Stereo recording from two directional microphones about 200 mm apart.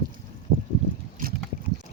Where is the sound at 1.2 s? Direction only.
45° right (ahead or behind).